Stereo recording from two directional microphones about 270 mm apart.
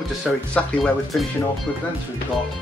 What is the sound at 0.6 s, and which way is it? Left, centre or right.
Speech, centre.